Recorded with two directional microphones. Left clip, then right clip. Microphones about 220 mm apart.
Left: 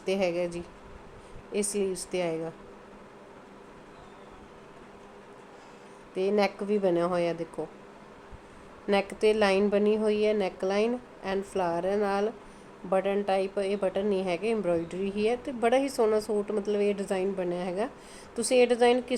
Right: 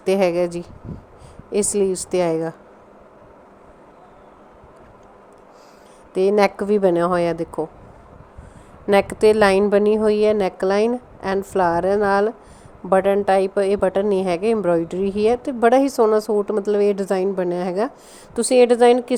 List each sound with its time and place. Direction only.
0.0 s a woman's voice: 35° right (ahead or behind)
6.1 s a woman's voice: 35° right (ahead or behind)
8.9 s a woman's voice: 35° right (ahead or behind)